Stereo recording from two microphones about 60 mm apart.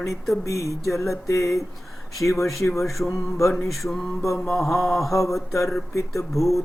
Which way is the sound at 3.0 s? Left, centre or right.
Left.